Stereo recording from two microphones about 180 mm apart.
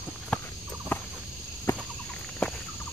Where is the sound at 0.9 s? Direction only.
10° left (ahead or behind).